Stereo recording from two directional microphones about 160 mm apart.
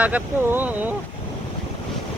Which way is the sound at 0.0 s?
10° right (ahead or behind).